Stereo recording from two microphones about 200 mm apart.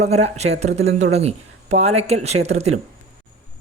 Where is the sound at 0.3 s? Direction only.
35° right (ahead or behind).